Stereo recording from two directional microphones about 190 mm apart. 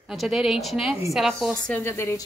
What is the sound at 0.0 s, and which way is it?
A woman's voice, centre (ahead or behind).